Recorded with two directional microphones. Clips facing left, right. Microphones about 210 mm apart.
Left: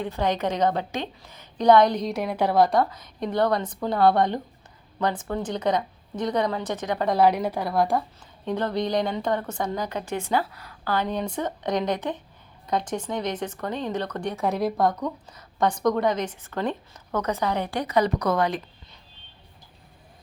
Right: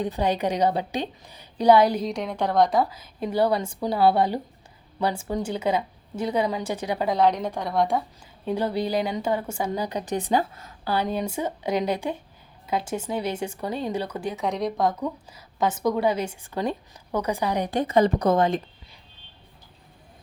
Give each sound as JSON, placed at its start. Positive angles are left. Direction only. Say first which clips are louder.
{"t": 0.0, "sound": "speech", "louder": "right 1 dB", "side_deg": -15}
{"t": 7.1, "sound": "a woman's voice", "louder": "left 2 dB", "side_deg": 5}
{"t": 8.4, "sound": "a woman's voice", "louder": "even", "side_deg": -10}
{"t": 10.9, "sound": "speech", "louder": "right 1 dB", "side_deg": -10}